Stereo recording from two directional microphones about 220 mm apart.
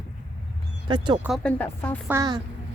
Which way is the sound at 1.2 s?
Centre (ahead or behind).